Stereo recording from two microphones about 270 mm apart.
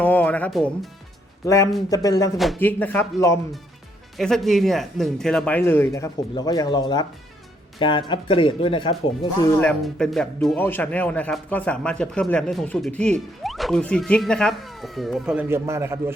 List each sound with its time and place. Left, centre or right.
0.0 s speech: centre
9.6 s speech: centre